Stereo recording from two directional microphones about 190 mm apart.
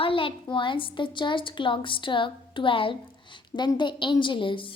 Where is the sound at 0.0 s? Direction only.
30° left (ahead or behind).